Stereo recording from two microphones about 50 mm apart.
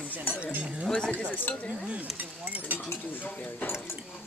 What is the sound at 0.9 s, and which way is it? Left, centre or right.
Cutlery, centre.